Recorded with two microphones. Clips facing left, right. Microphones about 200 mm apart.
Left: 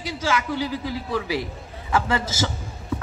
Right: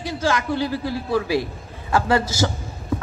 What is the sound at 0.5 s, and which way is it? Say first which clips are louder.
Speech: right 3 dB; 15° left (ahead or behind).